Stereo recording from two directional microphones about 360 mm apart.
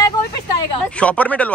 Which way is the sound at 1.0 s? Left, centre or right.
Centre.